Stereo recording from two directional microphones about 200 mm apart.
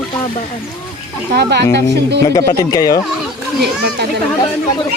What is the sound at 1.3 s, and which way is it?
Speech, 55° right (ahead or behind).